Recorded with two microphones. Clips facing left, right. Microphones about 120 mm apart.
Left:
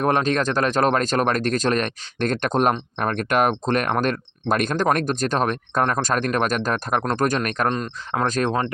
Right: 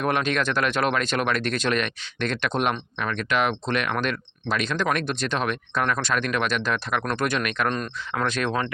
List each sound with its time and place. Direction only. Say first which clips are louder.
0.0 s speech: left 4 dB; 40° left (ahead or behind)
7.7 s speech: left 3 dB; 25° left (ahead or behind)
8.2 s speech: left 3 dB; 40° left (ahead or behind)